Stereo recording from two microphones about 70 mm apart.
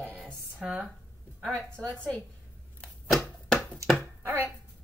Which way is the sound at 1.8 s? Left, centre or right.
Centre.